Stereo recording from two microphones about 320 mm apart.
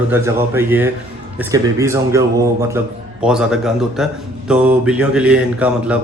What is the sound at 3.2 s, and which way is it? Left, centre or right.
A man's voice, centre.